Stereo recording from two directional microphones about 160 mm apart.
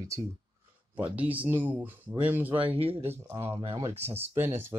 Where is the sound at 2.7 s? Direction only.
35° right (ahead or behind).